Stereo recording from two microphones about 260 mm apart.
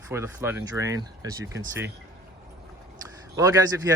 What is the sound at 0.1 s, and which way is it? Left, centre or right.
Speech, centre.